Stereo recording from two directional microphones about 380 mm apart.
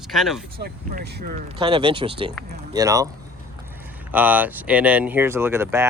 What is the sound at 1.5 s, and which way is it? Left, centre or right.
Speech, centre.